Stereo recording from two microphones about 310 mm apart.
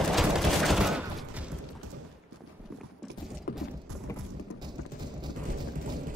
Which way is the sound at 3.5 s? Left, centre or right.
Left.